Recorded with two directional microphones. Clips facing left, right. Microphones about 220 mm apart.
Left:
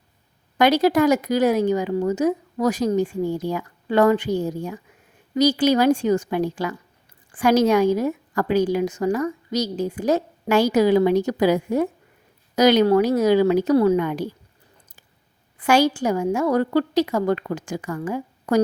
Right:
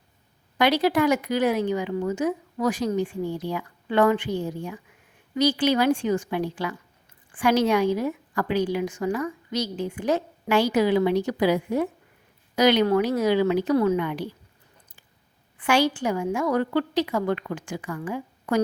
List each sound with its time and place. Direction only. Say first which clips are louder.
0.6 s a woman's voice: left 4 dB; 45° left (ahead or behind)
15.5 s a woman's voice: left 4 dB; 40° left (ahead or behind)